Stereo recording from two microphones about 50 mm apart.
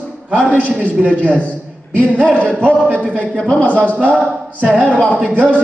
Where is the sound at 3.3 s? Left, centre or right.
Centre.